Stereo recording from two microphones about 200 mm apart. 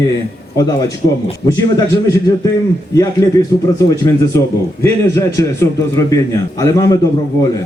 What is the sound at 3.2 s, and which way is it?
Speech, 15° left (ahead or behind).